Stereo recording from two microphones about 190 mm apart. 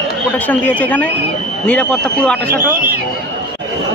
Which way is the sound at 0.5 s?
10° left (ahead or behind).